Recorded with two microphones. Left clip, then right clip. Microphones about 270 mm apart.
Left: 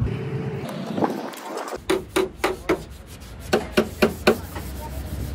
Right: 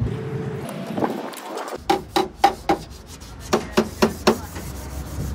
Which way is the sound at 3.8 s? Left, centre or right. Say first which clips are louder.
Even; right.